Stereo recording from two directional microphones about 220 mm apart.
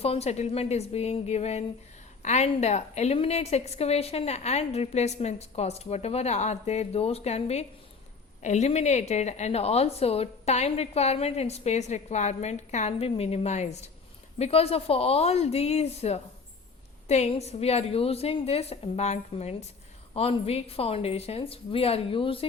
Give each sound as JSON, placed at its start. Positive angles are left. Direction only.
{"t": 0.0, "sound": "a woman's voice", "side_deg": 30}